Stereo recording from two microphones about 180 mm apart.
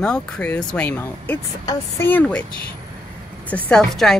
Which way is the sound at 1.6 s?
20° left (ahead or behind).